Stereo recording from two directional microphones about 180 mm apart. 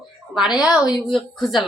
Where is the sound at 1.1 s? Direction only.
Centre (ahead or behind).